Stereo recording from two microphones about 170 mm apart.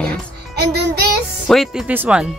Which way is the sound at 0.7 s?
75° right (ahead or behind).